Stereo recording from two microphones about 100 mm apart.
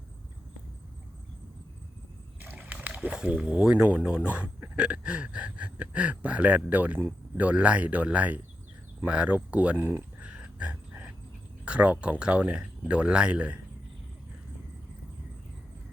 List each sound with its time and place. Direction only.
2.4 s speech: 15° right (ahead or behind)
9.7 s speech: 25° right (ahead or behind)
10.2 s a sound: 10° right (ahead or behind)
11.6 s speech: 10° right (ahead or behind)